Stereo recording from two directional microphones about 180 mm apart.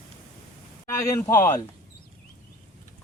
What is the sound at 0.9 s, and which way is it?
Speech, 15° left (ahead or behind).